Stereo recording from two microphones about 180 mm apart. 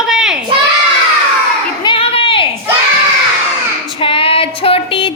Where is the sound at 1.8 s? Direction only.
30° left (ahead or behind).